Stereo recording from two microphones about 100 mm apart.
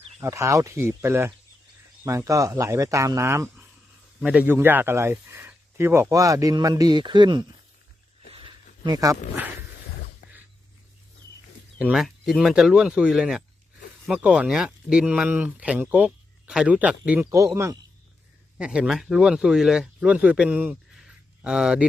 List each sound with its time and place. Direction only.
0.2 s speech: 30° right (ahead or behind)
4.2 s speech: 15° right (ahead or behind); by 7.4 s 50° right (ahead or behind)
8.3 s a sound: 60° right (ahead or behind)
8.9 s speech: 35° right (ahead or behind)
11.8 s speech: 10° right (ahead or behind)
17.3 s speech: 30° right (ahead or behind)
18.5 s speech: 10° right (ahead or behind)
20.9 s a sound: 5° right (ahead or behind)